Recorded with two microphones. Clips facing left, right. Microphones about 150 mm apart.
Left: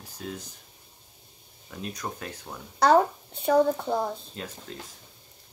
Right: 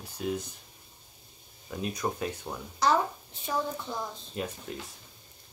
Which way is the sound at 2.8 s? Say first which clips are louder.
Left 6 dB; 60° left (ahead or behind).